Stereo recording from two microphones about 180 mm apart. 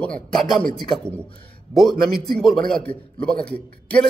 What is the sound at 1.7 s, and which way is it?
A man's voice, centre (ahead or behind).